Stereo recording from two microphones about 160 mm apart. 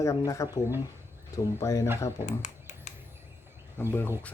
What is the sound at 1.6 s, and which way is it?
Speech, 20° left (ahead or behind).